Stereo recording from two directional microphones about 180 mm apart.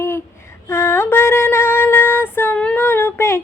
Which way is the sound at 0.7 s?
15° left (ahead or behind).